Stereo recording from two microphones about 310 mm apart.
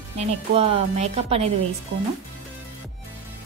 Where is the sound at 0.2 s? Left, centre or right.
Right.